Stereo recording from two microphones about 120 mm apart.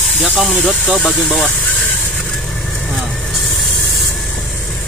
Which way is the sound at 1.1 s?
Centre (ahead or behind).